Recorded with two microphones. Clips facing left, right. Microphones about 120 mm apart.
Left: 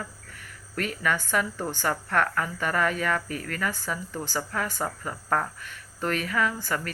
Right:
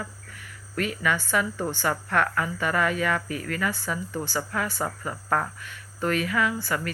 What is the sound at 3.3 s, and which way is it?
Speech, 45° left (ahead or behind).